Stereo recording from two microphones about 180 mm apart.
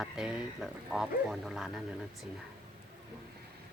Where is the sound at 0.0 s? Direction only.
5° right (ahead or behind).